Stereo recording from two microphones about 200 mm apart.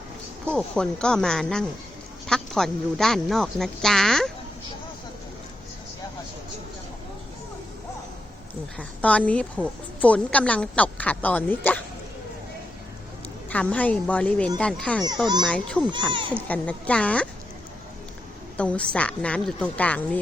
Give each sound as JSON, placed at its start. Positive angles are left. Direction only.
{"t": 0.4, "sound": "a woman's voice", "side_deg": 5}
{"t": 8.8, "sound": "a woman's voice", "side_deg": 5}
{"t": 13.5, "sound": "a woman's voice", "side_deg": 10}
{"t": 15.0, "sound": "a child's voice", "side_deg": -20}
{"t": 15.4, "sound": "a woman's voice", "side_deg": 5}
{"t": 15.9, "sound": "a child's voice", "side_deg": -25}
{"t": 16.5, "sound": "a woman's voice", "side_deg": 5}
{"t": 18.5, "sound": "a woman's voice", "side_deg": 5}